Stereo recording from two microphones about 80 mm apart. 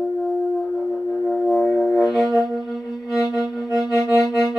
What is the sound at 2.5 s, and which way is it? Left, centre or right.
Music, centre.